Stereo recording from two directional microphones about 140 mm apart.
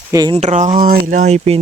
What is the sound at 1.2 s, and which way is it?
Speech, 40° right (ahead or behind).